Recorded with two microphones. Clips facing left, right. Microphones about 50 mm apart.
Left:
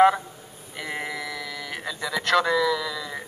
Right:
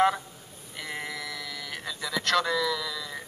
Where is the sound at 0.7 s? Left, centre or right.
Centre.